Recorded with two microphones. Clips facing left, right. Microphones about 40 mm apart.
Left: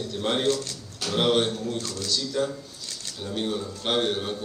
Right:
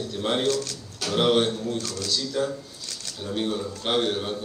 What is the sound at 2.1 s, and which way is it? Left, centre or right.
A man's voice, centre.